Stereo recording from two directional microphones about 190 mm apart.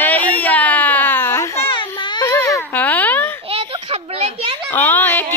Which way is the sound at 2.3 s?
15° left (ahead or behind).